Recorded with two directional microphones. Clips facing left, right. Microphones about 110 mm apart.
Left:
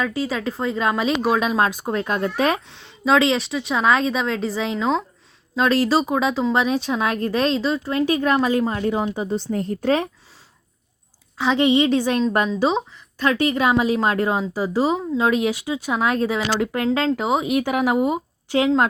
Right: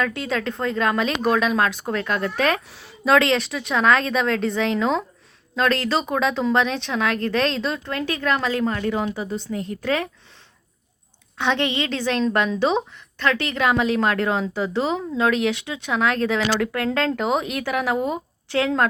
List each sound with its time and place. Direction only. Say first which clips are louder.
0.0 s speech: left 1 dB; 5° left (ahead or behind)
1.4 s a woman's voice: left 1 dB; 25° left (ahead or behind)
2.6 s speech: even; 5° right (ahead or behind)
7.9 s a woman's voice: left 5 dB; 15° left (ahead or behind)
9.5 s a woman's voice: left 4 dB; 40° left (ahead or behind)
11.3 s speech: left 5 dB; 5° left (ahead or behind)
17.2 s speech: left 3 dB; 5° left (ahead or behind)